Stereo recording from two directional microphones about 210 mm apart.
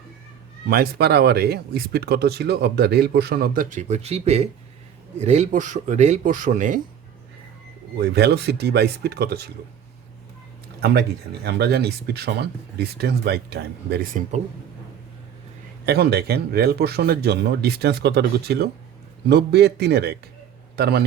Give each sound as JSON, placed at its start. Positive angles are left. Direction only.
{"t": 0.7, "sound": "speech", "side_deg": -50}
{"t": 7.9, "sound": "speech", "side_deg": -50}
{"t": 10.8, "sound": "speech", "side_deg": -50}
{"t": 15.9, "sound": "speech", "side_deg": -50}